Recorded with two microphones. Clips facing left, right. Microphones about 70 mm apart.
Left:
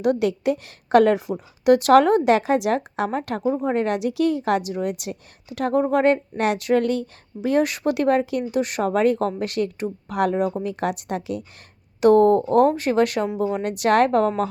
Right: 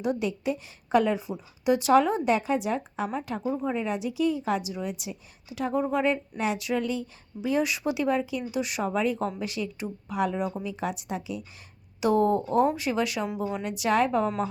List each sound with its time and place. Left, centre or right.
0.0 s a woman's voice: left